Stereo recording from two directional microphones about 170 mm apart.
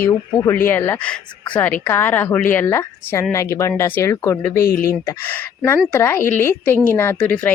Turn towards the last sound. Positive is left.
turn(degrees=10)  # may be behind; listen again after turning